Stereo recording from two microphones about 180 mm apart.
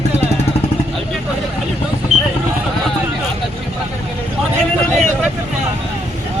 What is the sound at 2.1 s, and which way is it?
Vehicle, 40° right (ahead or behind).